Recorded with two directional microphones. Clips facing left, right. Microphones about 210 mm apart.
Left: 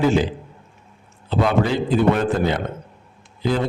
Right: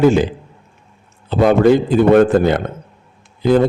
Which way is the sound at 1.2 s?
50° right (ahead or behind).